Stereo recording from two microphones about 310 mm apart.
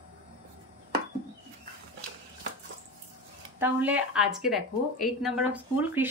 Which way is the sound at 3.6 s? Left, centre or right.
Centre.